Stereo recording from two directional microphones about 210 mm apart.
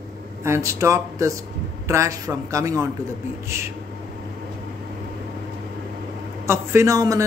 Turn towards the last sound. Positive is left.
turn(degrees=-15)  # may be behind; listen again after turning